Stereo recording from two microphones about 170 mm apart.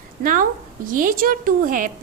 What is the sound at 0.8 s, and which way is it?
A woman's voice, 55° right (ahead or behind).